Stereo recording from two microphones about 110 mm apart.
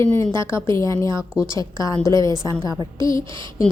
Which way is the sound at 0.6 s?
30° left (ahead or behind).